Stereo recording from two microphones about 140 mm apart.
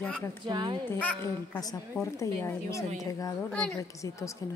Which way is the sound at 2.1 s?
20° left (ahead or behind).